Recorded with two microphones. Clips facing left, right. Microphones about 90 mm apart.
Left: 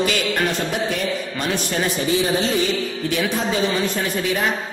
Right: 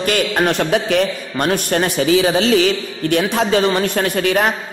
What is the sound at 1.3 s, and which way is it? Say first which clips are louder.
A man's voice: right 9 dB; 55° right (ahead or behind).